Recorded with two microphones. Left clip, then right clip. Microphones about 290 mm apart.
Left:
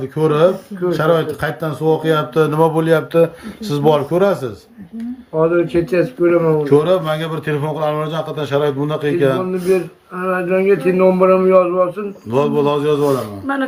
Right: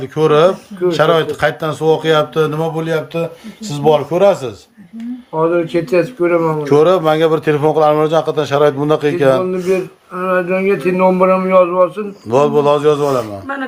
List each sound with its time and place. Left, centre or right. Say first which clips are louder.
0.0 s a man's voice: right 3 dB; centre
5.4 s speech: even; right